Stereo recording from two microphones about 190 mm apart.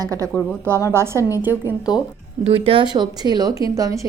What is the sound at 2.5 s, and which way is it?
A woman's voice, 30° right (ahead or behind).